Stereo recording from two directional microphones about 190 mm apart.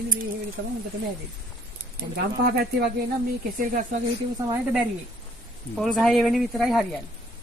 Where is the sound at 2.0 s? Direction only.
60° right (ahead or behind).